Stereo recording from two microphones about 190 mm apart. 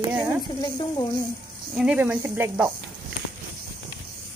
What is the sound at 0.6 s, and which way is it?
Speech, 20° left (ahead or behind).